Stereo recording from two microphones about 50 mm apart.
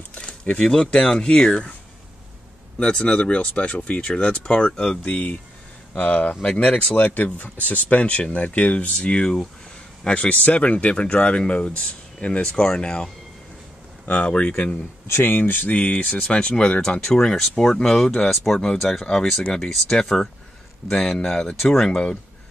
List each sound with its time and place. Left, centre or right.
0.1 s speech: left
2.8 s speech: centre
14.0 s speech: left
15.0 s speech: left
15.7 s speech: left
18.3 s speech: centre
18.9 s speech: centre
20.1 s speech: centre